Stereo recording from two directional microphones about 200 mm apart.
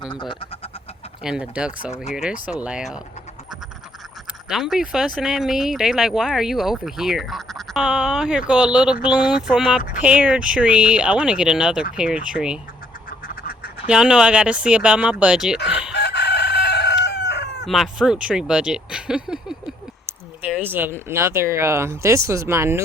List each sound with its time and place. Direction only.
0.0 s speech: 20° left (ahead or behind)
1.2 s speech: 5° right (ahead or behind)
4.4 s speech: 5° right (ahead or behind)
13.1 s duck: 45° left (ahead or behind)
13.8 s speech: 5° right (ahead or behind)
15.9 s chicken: 60° left (ahead or behind)
17.7 s speech: centre (ahead or behind)
20.7 s speech: 10° right (ahead or behind)